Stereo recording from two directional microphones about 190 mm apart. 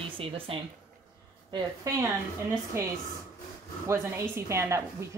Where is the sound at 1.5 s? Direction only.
20° right (ahead or behind).